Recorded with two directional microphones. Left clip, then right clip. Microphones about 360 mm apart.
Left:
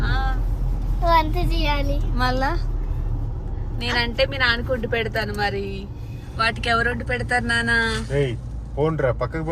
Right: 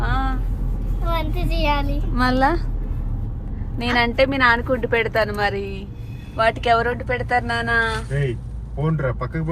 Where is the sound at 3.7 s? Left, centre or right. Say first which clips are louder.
Right 4 dB; centre.